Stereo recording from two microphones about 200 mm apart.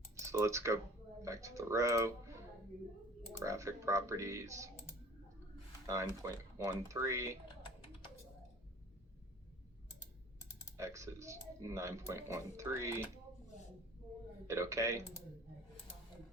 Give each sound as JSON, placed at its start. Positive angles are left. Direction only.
{"t": 0.3, "sound": "speech", "side_deg": -15}
{"t": 3.4, "sound": "speech", "side_deg": -15}
{"t": 5.8, "sound": "speech", "side_deg": -15}
{"t": 10.8, "sound": "speech", "side_deg": -15}
{"t": 14.4, "sound": "speech", "side_deg": -15}